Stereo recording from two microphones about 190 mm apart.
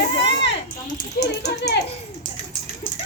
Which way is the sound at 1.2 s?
50° left (ahead or behind).